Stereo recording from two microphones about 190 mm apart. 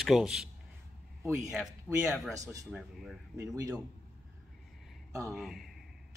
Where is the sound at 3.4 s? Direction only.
20° right (ahead or behind).